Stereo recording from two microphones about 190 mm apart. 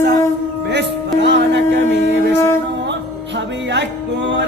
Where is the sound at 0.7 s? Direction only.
65° right (ahead or behind).